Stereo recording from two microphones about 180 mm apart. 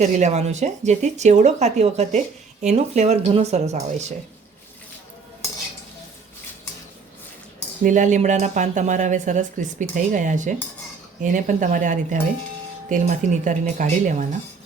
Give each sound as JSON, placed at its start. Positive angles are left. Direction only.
{"t": 0.0, "sound": "speech", "side_deg": -40}
{"t": 7.9, "sound": "speech", "side_deg": -45}